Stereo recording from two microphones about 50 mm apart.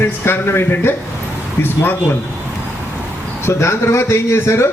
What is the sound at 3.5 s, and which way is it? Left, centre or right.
A man's voice, left.